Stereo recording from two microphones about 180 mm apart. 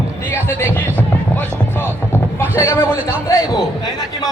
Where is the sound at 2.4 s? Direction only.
15° left (ahead or behind).